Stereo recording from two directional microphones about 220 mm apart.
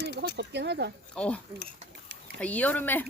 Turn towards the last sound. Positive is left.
turn(degrees=10)  # may be behind; listen again after turning